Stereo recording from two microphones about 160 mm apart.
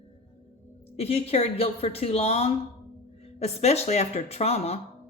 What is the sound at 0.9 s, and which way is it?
Speech, 40° left (ahead or behind).